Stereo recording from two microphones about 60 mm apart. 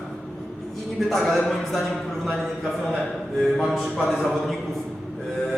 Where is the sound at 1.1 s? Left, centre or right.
Centre.